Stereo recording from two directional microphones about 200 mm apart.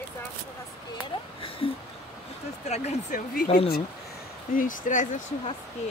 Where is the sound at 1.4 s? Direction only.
25° left (ahead or behind); by 3.5 s 45° left (ahead or behind).